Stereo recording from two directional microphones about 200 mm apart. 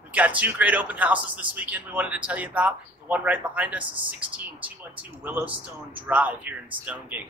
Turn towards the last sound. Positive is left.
turn(degrees=-10)  # may be behind; listen again after turning